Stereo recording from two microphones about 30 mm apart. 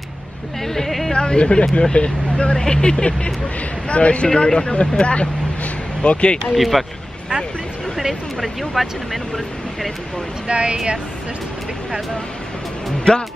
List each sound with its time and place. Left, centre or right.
0.7 s music: centre
1.1 s speech: left
6.5 s speech: centre
8.4 s speech: centre
10.5 s speech: right
13.1 s speech: left